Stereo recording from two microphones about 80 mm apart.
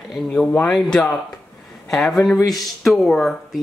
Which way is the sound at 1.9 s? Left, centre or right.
Centre.